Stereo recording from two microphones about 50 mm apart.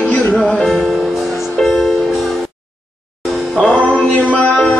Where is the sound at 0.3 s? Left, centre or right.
Centre.